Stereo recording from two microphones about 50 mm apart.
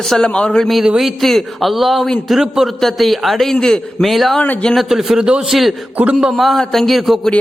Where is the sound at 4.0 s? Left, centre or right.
Centre.